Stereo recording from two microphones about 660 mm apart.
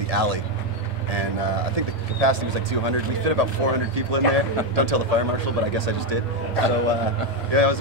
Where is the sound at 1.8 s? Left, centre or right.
Right.